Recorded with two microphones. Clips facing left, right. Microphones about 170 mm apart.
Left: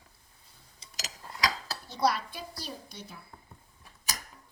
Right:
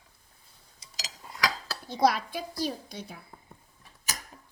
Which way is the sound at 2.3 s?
90° right.